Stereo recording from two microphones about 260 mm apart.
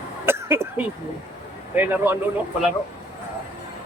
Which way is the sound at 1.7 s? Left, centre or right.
Centre.